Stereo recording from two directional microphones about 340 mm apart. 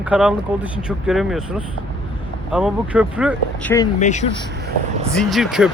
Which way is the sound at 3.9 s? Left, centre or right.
Left.